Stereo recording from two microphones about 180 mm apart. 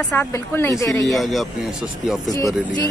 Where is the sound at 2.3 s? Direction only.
20° left (ahead or behind).